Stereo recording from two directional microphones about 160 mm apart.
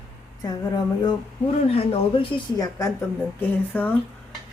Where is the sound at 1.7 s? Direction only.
35° left (ahead or behind).